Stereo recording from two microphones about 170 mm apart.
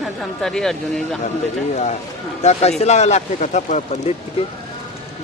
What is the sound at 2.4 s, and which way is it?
Speech, 40° left (ahead or behind).